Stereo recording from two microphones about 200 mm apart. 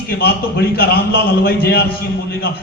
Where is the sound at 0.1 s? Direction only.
50° left (ahead or behind).